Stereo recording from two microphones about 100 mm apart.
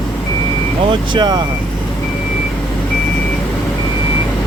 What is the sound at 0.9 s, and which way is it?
Speech, 45° right (ahead or behind).